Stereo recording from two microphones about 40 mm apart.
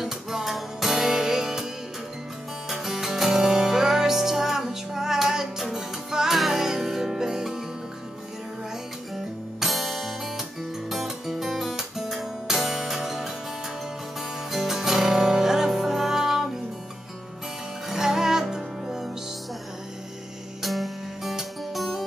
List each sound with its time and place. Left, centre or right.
0.0 s music: centre
2.7 s music: centre
9.1 s guitar: centre
10.9 s music: centre
14.5 s music: centre
17.8 s music: centre
20.6 s music: centre